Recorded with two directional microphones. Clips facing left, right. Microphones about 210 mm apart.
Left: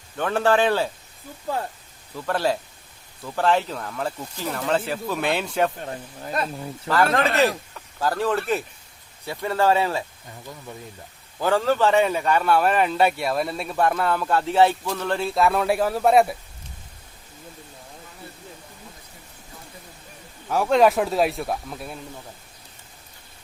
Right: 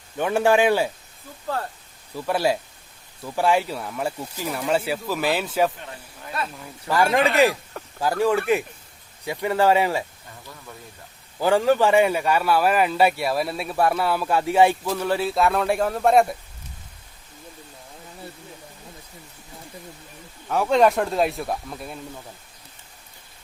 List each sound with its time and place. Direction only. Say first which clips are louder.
0.2 s speech: right 1 dB; 10° right (ahead or behind)
2.1 s speech: right 1 dB; 10° right (ahead or behind)
5.8 s speech: left 6 dB; 40° left (ahead or behind)
6.8 s speech: right 1 dB; 15° right (ahead or behind)
11.3 s speech: right 2 dB; 15° right (ahead or behind); by 16.3 s 5° left (ahead or behind)
20.5 s speech: even; centre (ahead or behind)